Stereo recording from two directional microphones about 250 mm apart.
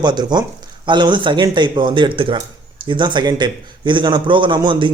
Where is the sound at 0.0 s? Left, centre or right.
Centre.